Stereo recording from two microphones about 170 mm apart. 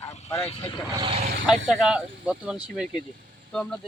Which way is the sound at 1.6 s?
5° right (ahead or behind).